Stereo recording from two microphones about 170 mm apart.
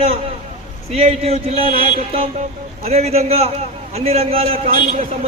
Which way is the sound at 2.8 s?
35° right (ahead or behind).